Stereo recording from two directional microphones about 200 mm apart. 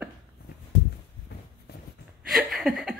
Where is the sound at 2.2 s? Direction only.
Centre (ahead or behind).